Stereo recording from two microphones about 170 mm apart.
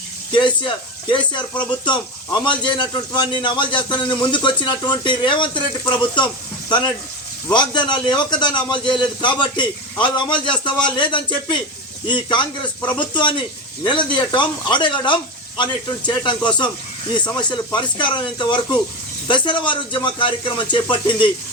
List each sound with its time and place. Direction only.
0.3 s a man's voice: 25° left (ahead or behind)
17.7 s a man's voice: 25° left (ahead or behind)